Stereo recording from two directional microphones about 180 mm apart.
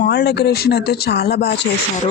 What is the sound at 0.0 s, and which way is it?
Speech, 70° left (ahead or behind).